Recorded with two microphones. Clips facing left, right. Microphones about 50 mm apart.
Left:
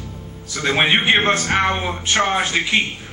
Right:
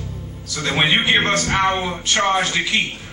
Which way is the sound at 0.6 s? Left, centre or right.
Left.